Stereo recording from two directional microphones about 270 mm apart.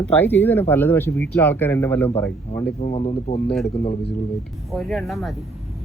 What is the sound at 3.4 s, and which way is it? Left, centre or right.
Speech, centre.